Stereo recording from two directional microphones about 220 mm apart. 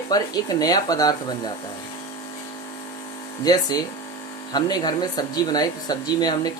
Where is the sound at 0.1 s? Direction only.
15° left (ahead or behind).